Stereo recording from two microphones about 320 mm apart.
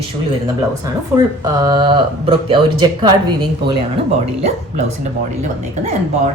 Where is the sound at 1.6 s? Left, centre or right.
Centre.